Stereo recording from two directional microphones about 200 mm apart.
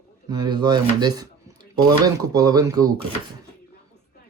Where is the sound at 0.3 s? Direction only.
20° right (ahead or behind).